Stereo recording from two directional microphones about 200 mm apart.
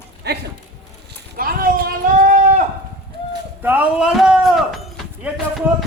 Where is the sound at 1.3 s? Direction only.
45° right (ahead or behind).